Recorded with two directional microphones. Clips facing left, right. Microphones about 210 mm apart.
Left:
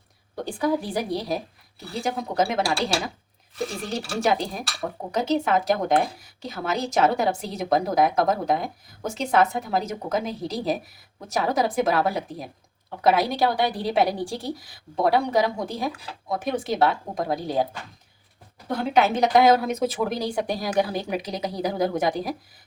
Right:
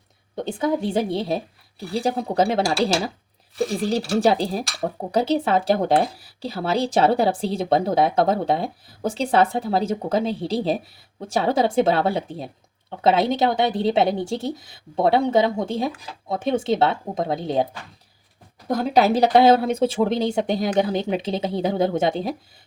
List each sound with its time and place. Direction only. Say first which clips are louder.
0.3 s speech: right 2 dB; 20° right (ahead or behind)
18.7 s speech: right 3 dB; 40° right (ahead or behind)